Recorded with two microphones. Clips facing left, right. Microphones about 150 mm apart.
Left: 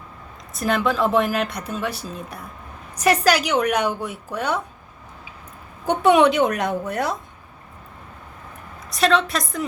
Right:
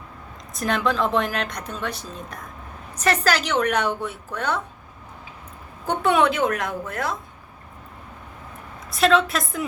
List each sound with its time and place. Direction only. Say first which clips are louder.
0.5 s a woman's voice: left 2 dB; 5° left (ahead or behind)
5.8 s a woman's voice: left 4 dB; 15° left (ahead or behind)
8.9 s speech: even; centre (ahead or behind)